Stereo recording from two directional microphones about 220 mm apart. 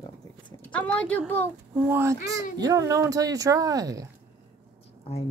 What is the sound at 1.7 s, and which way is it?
Speech, 10° right (ahead or behind).